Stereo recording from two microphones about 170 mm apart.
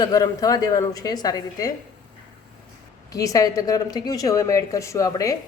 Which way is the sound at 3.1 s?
20° left (ahead or behind).